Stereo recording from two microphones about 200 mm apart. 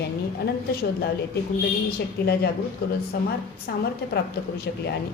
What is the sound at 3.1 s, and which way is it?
A woman's voice, 50° left (ahead or behind).